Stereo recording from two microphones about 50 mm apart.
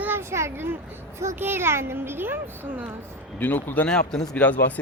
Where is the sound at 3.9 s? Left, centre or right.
Centre.